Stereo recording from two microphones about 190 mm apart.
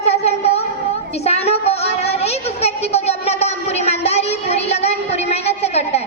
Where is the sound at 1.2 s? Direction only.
35° left (ahead or behind).